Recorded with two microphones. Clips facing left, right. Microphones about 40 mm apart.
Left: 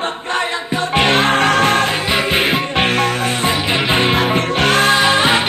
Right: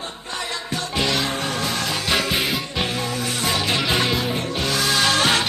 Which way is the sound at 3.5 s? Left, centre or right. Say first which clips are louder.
Left 3 dB; left.